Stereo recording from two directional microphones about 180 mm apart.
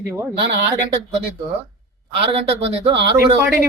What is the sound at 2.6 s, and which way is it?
Speech, 30° right (ahead or behind).